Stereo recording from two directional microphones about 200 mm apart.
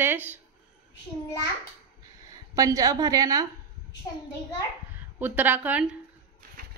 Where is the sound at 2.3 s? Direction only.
15° right (ahead or behind).